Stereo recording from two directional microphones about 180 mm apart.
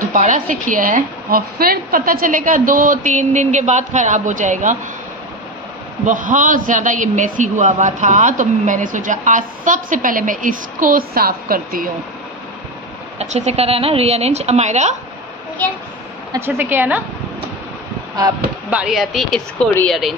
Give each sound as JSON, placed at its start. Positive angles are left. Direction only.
{"t": 0.1, "sound": "a man's voice", "side_deg": -45}
{"t": 6.0, "sound": "a man's voice", "side_deg": -45}
{"t": 13.2, "sound": "a woman's voice", "side_deg": -40}
{"t": 16.3, "sound": "speech", "side_deg": -15}
{"t": 18.7, "sound": "speech", "side_deg": -5}